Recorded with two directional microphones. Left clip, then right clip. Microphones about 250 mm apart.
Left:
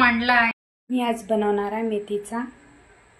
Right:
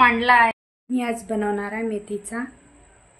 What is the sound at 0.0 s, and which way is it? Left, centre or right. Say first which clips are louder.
Speech: right 3 dB; right.